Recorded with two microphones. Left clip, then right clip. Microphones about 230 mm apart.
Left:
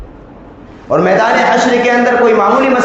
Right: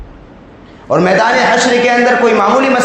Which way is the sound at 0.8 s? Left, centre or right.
Right.